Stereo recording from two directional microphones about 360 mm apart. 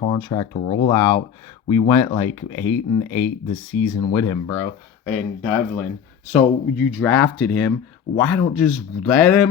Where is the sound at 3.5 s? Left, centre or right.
Left.